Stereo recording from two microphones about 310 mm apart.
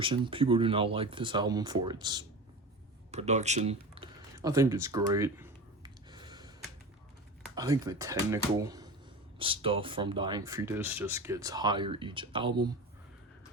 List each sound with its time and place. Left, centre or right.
0.0 s speech: centre
4.4 s a sound: centre
7.5 s speech: centre